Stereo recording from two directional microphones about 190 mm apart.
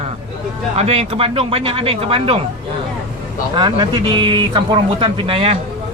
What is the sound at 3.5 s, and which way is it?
A man's voice, 25° right (ahead or behind).